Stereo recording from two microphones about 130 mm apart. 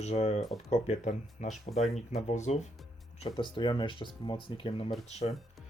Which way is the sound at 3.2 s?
40° left (ahead or behind).